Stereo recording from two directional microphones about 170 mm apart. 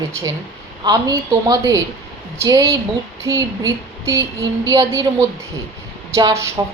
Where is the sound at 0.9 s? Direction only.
25° right (ahead or behind).